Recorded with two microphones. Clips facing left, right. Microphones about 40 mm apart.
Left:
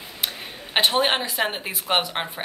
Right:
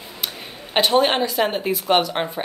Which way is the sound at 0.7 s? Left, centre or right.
Centre.